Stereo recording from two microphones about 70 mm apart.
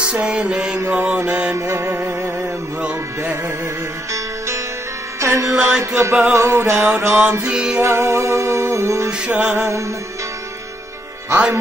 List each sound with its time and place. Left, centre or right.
0.0 s music: centre
0.8 s mantra: right
1.6 s music: right
5.2 s music: right
7.4 s music: centre
7.7 s music: right
9.3 s mantra: right
9.6 s music: right